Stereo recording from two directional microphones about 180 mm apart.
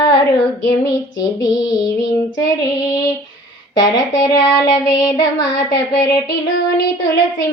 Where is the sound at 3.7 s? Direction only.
20° left (ahead or behind).